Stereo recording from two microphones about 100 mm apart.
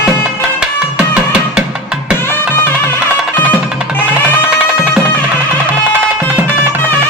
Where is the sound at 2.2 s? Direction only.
25° left (ahead or behind).